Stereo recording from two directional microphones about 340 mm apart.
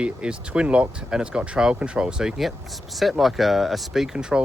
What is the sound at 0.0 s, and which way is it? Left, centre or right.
Speech, centre.